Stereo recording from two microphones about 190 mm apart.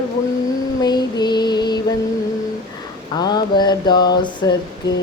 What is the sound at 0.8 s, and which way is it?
Female singing, 20° left (ahead or behind).